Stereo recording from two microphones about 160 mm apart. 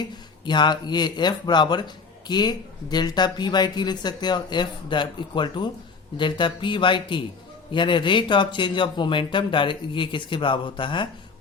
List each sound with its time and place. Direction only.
0.0 s speech: 30° left (ahead or behind)